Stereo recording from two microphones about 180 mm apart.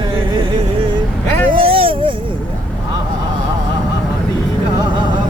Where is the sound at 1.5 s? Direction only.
30° right (ahead or behind).